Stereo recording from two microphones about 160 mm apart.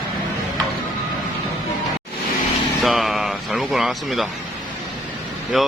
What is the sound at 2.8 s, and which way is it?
Speech, centre (ahead or behind).